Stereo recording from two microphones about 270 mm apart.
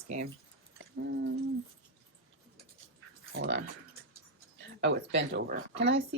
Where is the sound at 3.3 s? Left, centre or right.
Right.